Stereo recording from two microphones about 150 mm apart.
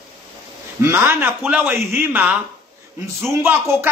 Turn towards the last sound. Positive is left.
turn(degrees=-15)  # may be behind; listen again after turning